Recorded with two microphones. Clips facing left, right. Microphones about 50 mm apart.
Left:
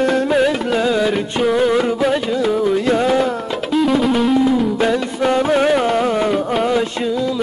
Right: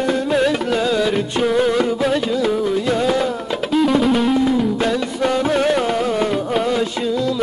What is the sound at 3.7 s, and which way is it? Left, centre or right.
Music, centre.